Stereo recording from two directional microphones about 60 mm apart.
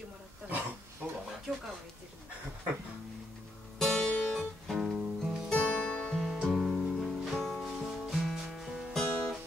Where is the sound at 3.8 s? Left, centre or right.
Centre.